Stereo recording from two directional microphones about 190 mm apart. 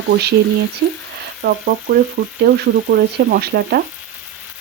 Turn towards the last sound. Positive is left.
turn(degrees=-55)  # may be behind; listen again after turning